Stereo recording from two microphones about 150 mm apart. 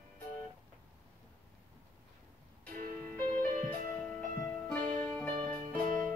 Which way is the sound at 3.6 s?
10° left (ahead or behind).